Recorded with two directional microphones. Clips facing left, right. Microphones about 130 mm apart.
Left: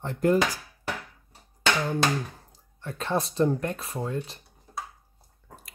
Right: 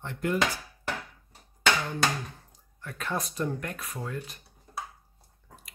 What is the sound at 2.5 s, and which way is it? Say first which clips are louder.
Speech: left 5 dB; 30° left (ahead or behind).